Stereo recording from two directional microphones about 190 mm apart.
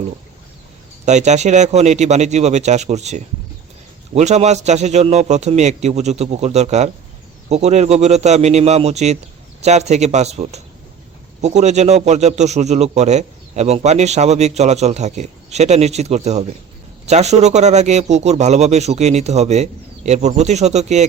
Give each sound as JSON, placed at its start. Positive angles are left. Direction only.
{"t": 1.0, "sound": "a man's voice", "side_deg": -35}